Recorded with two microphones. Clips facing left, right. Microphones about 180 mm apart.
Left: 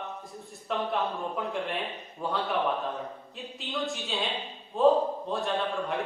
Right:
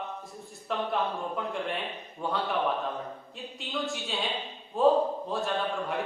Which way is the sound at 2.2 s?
Centre (ahead or behind).